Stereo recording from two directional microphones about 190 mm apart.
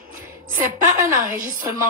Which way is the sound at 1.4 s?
45° right (ahead or behind).